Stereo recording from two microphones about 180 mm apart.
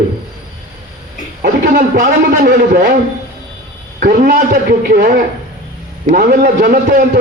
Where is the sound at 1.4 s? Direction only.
50° right (ahead or behind).